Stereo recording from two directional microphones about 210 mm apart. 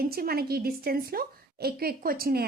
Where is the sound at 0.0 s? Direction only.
45° right (ahead or behind).